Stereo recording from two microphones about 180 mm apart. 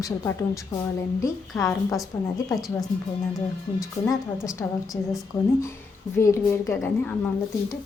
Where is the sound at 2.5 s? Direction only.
Centre (ahead or behind).